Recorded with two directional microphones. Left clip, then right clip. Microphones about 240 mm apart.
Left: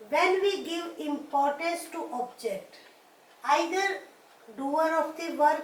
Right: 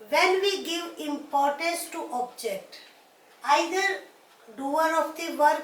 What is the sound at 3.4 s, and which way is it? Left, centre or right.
A woman's voice, centre.